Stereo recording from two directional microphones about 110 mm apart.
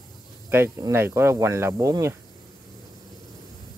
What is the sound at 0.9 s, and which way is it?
Speech, 20° right (ahead or behind).